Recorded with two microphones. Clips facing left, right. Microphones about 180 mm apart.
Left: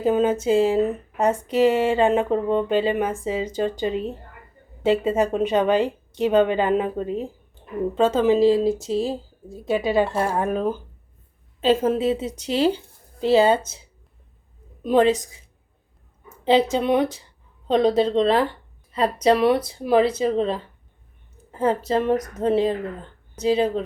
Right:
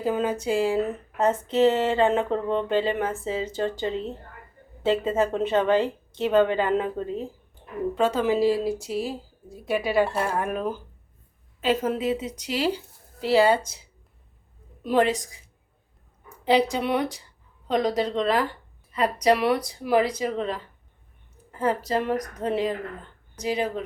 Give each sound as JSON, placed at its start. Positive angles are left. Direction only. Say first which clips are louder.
{"t": 0.0, "sound": "a woman's voice", "louder": "left 5 dB", "side_deg": 20}
{"t": 14.8, "sound": "a woman's voice", "louder": "left 4 dB", "side_deg": 20}
{"t": 16.4, "sound": "a woman's voice", "louder": "left 3 dB", "side_deg": 25}
{"t": 21.6, "sound": "a woman's voice", "louder": "left 4 dB", "side_deg": 25}